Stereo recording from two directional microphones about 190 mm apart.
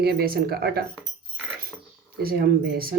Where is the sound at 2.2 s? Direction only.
55° right (ahead or behind).